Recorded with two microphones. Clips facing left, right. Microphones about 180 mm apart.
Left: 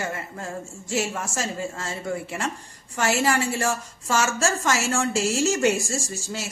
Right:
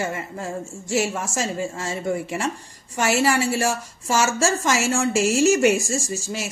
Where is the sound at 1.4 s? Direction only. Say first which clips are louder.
Right 4 dB; 15° right (ahead or behind).